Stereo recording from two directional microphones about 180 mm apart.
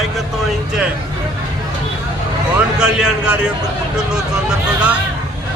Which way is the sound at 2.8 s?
5° right (ahead or behind).